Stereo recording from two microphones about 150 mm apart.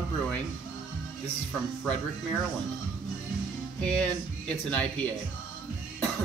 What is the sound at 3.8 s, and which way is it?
Speech, 5° left (ahead or behind).